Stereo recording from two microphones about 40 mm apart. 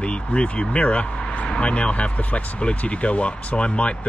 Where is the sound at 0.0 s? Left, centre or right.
Left.